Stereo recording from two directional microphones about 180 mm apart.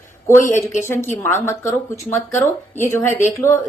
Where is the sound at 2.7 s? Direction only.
15° left (ahead or behind).